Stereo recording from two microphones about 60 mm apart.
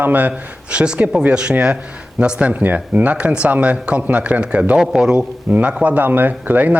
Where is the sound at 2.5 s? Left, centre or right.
Right.